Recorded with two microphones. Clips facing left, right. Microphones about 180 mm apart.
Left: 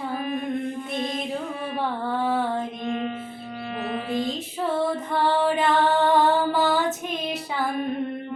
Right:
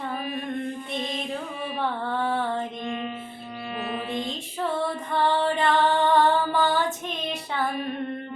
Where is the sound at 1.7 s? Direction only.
10° left (ahead or behind).